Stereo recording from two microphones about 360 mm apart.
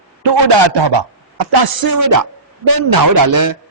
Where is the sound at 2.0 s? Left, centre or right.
Right.